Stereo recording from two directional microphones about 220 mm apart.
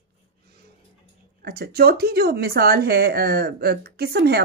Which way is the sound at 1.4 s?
45° right (ahead or behind).